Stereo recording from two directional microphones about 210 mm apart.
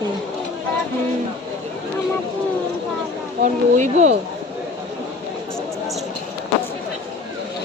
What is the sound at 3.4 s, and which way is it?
Speech, 35° right (ahead or behind).